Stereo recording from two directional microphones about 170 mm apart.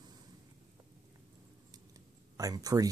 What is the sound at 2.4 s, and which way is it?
Speech, 20° right (ahead or behind).